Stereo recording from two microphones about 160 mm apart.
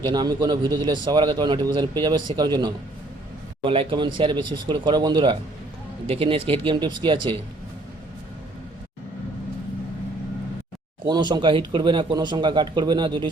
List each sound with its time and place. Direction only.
0.0 s speech: 25° right (ahead or behind)
11.0 s speech: 30° right (ahead or behind)